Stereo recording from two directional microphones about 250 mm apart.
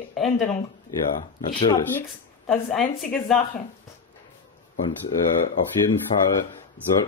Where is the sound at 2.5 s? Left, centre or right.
Centre.